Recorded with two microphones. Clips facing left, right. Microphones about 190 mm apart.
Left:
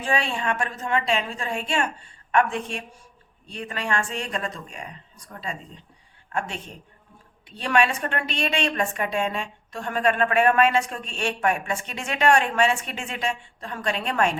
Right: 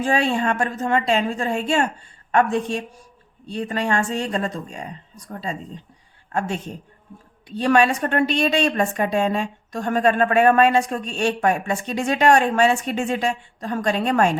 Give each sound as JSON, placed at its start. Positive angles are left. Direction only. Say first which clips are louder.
{"t": 0.0, "sound": "a woman's voice", "louder": "right 6 dB", "side_deg": -40}